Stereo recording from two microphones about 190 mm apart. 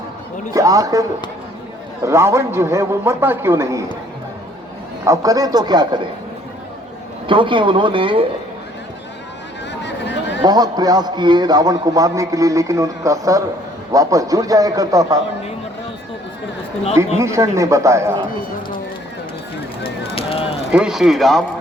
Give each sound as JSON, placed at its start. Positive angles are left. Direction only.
{"t": 0.5, "sound": "a man's voice", "side_deg": -20}
{"t": 2.0, "sound": "a man's voice", "side_deg": -15}
{"t": 5.0, "sound": "a man's voice", "side_deg": -15}
{"t": 7.3, "sound": "a man's voice", "side_deg": -25}
{"t": 9.8, "sound": "a sound", "side_deg": 65}
{"t": 10.4, "sound": "a man's voice", "side_deg": -20}
{"t": 17.2, "sound": "a man's voice", "side_deg": -15}
{"t": 19.8, "sound": "fire", "side_deg": 30}
{"t": 20.7, "sound": "speech", "side_deg": -5}